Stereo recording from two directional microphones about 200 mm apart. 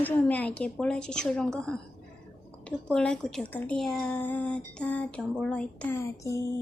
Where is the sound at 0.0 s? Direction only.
10° left (ahead or behind).